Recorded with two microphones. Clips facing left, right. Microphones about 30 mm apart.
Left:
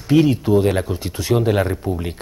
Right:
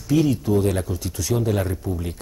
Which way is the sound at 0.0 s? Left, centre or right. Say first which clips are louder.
Left 4 dB; left.